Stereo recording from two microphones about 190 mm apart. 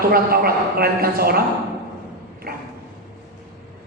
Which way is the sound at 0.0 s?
50° right (ahead or behind).